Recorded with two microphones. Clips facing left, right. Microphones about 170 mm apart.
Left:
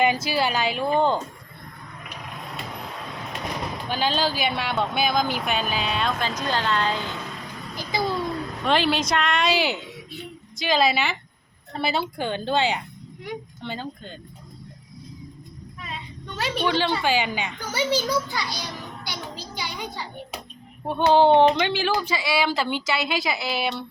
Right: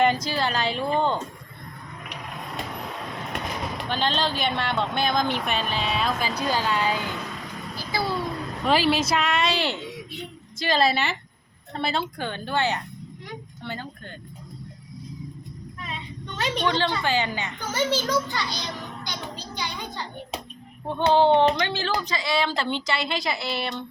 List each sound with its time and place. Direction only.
0.0 s a woman's voice: 5° left (ahead or behind)
3.8 s speech: 5° left (ahead or behind); by 7.1 s 10° right (ahead or behind)
7.8 s babbling: 15° left (ahead or behind)
8.6 s a woman's voice: 5° right (ahead or behind); by 14.1 s 20° left (ahead or behind)
16.4 s a child's voice: 10° left (ahead or behind)